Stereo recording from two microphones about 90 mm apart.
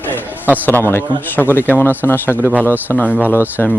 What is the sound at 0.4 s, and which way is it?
Speech, 20° right (ahead or behind).